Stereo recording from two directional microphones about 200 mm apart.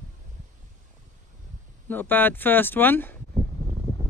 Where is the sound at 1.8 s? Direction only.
10° left (ahead or behind).